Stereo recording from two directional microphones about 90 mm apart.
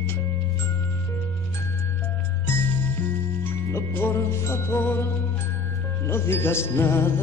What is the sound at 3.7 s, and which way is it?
Music, 25° left (ahead or behind).